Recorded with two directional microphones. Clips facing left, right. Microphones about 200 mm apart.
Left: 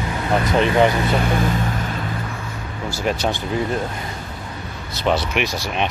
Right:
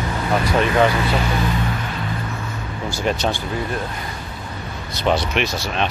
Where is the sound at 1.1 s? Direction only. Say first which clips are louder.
Left 2 dB; 50° left (ahead or behind).